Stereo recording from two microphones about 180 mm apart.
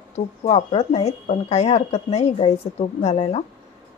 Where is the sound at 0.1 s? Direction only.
35° left (ahead or behind).